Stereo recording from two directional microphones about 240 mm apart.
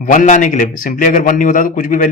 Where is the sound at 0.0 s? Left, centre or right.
Left.